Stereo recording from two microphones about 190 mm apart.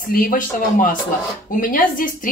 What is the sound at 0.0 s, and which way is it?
Speech, 50° left (ahead or behind).